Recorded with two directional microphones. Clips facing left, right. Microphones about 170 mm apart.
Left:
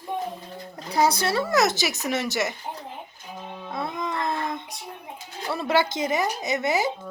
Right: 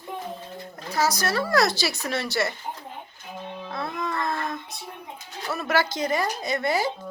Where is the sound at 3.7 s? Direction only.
20° left (ahead or behind).